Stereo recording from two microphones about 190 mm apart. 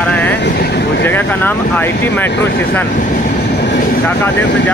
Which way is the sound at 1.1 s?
10° left (ahead or behind).